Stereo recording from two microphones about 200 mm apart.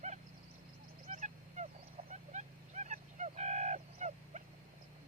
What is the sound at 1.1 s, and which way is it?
Honk, 35° right (ahead or behind).